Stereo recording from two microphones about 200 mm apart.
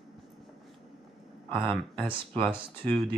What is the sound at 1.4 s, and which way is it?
Speech, 25° right (ahead or behind).